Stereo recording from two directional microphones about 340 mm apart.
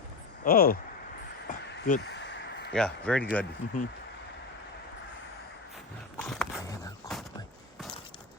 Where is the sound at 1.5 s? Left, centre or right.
Left.